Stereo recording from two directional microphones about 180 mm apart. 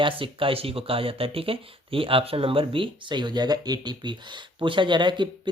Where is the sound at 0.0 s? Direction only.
30° right (ahead or behind).